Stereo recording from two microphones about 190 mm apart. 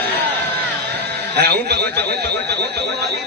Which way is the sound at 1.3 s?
60° right (ahead or behind).